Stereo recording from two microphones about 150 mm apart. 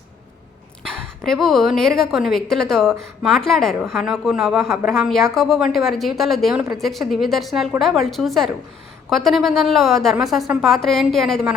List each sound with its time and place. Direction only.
1.2 s a woman's voice: centre (ahead or behind)